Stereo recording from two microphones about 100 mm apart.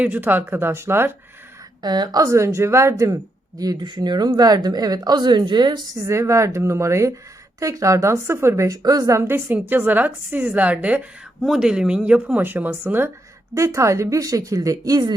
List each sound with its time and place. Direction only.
0.0 s a woman's voice: 20° right (ahead or behind)
1.8 s a woman's voice: 45° right (ahead or behind)
3.6 s speech: 45° right (ahead or behind)